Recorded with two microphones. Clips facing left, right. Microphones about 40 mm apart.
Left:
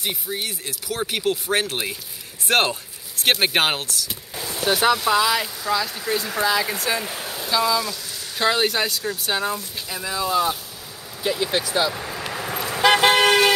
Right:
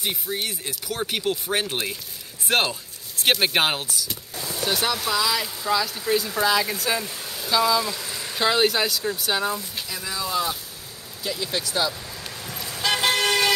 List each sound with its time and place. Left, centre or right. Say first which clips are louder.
0.0 s speech: even; centre
2.4 s speech: left 3 dB; left
3.3 s speech: left 1 dB; centre
4.1 s a sound: left 1 dB; centre
4.8 s speech: left 7 dB; left
5.6 s speech: even; centre
7.0 s speech: left 3 dB; left
7.3 s speech: even; centre
7.9 s a sound: right 2 dB; right
8.4 s speech: even; centre
9.8 s speech: left 6 dB; centre
11.2 s speech: left 5 dB; left
11.6 s speech: left 3 dB; centre
11.9 s vehicle: left 7 dB; left